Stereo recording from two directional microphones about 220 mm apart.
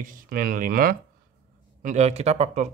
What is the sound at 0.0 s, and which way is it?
Speech, 40° right (ahead or behind).